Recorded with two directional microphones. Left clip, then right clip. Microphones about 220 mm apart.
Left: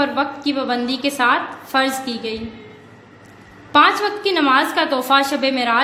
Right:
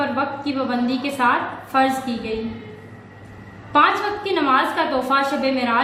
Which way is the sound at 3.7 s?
55° left (ahead or behind).